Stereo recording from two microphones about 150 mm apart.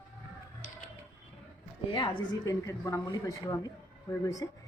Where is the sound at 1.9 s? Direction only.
30° left (ahead or behind).